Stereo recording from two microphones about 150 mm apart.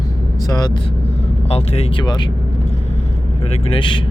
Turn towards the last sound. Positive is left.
turn(degrees=35)  # may be behind; listen again after turning